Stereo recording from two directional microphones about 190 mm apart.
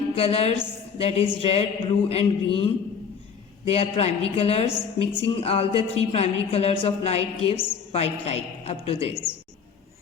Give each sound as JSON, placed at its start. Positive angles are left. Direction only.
{"t": 0.2, "sound": "a woman's voice", "side_deg": 30}